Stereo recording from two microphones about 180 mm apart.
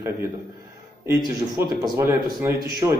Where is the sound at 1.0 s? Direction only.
15° right (ahead or behind).